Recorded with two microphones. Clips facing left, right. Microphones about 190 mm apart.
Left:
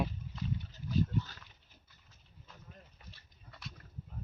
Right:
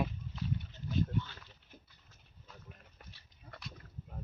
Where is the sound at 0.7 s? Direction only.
40° left (ahead or behind).